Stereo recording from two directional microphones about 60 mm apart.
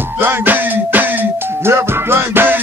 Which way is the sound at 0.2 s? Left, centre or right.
Right.